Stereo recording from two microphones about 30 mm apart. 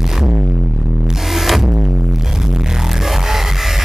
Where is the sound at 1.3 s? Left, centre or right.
Centre.